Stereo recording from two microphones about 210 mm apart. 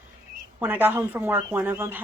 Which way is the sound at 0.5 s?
10° right (ahead or behind).